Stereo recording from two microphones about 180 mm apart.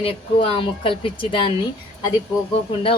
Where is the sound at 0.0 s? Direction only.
35° left (ahead or behind).